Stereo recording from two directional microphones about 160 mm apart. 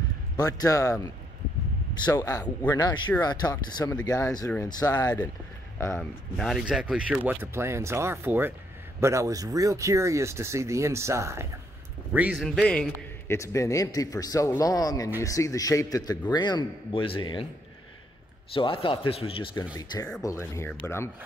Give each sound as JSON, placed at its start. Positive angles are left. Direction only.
{"t": 0.4, "sound": "a man's voice", "side_deg": 20}
{"t": 2.0, "sound": "a man's voice", "side_deg": 25}
{"t": 5.9, "sound": "speech", "side_deg": 5}
{"t": 12.1, "sound": "speech", "side_deg": -10}
{"t": 12.4, "sound": "a man's voice", "side_deg": 5}
{"t": 13.4, "sound": "a man's voice", "side_deg": 20}
{"t": 18.5, "sound": "a man's voice", "side_deg": 35}